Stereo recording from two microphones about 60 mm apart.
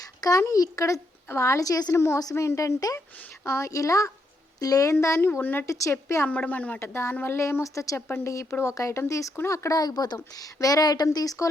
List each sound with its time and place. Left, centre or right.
0.0 s a child's voice: left
1.3 s a woman's voice: left
2.3 s a woman's voice: left
2.6 s a woman's voice: left
3.4 s a woman's voice: left
4.9 s a woman's voice: left
5.4 s a woman's voice: left
5.6 s a woman's voice: left
6.2 s speech: left
6.7 s a woman's voice: left
7.6 s a woman's voice: left
8.0 s a woman's voice: left
8.7 s a woman's voice: left
9.5 s speech: left